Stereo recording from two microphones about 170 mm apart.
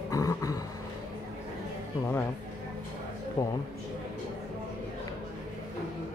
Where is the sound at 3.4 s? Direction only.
20° left (ahead or behind).